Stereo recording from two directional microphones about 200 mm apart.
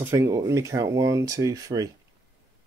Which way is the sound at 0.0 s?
15° right (ahead or behind).